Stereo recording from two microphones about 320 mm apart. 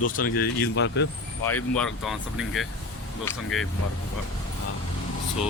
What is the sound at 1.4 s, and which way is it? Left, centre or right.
A man's voice, centre.